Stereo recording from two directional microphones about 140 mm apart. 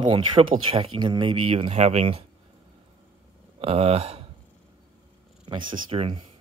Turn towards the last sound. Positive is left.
turn(degrees=-40)  # may be behind; listen again after turning